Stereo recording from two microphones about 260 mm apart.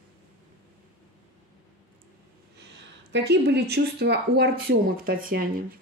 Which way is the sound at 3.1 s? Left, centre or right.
Right.